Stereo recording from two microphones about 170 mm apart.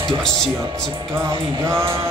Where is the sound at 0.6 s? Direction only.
30° right (ahead or behind).